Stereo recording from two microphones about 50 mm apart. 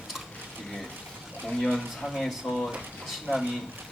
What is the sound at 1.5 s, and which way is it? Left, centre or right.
Speech, centre.